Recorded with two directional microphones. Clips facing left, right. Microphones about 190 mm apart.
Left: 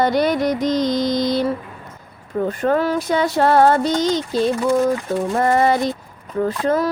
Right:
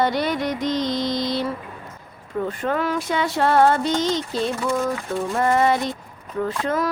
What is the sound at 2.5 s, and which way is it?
Music, 40° left (ahead or behind).